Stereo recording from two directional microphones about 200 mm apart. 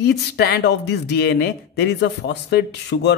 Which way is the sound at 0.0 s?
55° left (ahead or behind).